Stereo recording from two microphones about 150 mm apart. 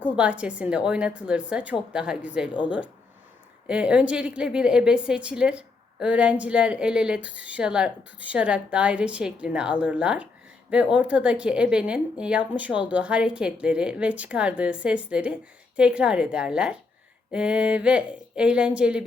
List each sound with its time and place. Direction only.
0.0 s a woman's voice: 10° right (ahead or behind)
3.7 s a woman's voice: 5° right (ahead or behind)